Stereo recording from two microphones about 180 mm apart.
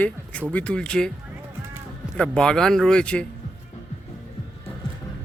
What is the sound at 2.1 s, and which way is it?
Speech, 5° left (ahead or behind).